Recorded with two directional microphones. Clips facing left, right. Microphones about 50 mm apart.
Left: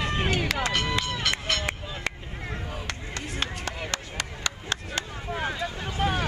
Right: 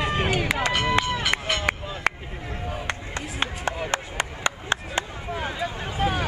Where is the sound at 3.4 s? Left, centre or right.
Right.